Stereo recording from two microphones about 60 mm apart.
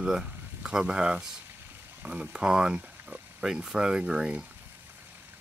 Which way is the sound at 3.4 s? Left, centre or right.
Centre.